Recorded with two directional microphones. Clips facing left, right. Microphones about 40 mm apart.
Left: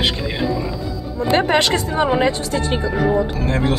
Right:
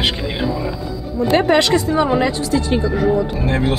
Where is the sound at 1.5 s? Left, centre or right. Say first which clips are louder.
Right 3 dB; left.